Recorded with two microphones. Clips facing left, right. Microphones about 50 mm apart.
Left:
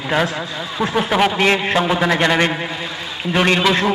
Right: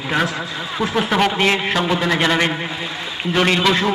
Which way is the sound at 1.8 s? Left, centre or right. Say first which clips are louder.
Left 2 dB; centre.